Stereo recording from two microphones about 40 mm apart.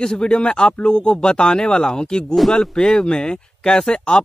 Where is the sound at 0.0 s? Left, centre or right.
Left.